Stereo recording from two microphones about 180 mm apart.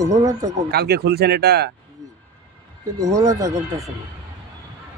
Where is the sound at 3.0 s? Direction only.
20° right (ahead or behind).